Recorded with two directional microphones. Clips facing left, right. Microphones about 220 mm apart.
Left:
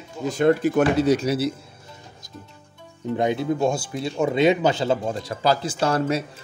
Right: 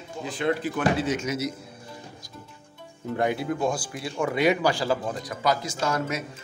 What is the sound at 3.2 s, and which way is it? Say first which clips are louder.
Speech: left 4 dB; 20° left (ahead or behind).